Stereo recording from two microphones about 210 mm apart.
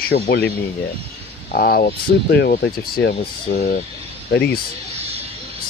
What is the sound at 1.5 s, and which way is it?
Speech, 45° left (ahead or behind).